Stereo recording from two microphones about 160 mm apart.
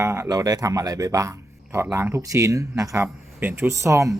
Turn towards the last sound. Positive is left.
turn(degrees=-20)  # may be behind; listen again after turning